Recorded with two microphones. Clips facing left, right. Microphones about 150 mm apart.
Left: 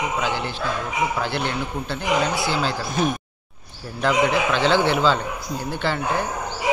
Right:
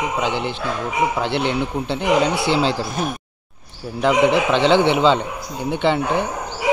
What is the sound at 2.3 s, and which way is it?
Speech, 70° right (ahead or behind).